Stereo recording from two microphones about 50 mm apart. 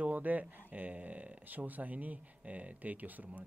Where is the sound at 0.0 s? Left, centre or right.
Right.